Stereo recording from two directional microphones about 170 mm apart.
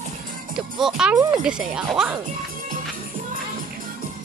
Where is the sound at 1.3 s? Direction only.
5° right (ahead or behind).